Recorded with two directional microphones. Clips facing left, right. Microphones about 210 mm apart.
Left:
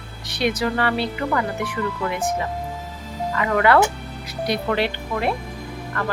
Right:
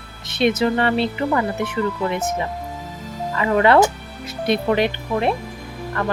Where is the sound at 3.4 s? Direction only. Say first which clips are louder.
Right 3 dB; 25° right (ahead or behind).